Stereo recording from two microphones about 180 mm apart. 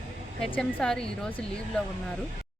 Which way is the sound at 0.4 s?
5° left (ahead or behind).